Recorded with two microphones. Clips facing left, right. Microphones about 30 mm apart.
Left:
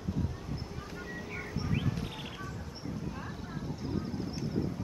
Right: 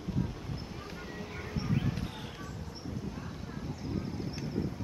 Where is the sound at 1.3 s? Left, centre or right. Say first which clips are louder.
Right 1 dB; centre.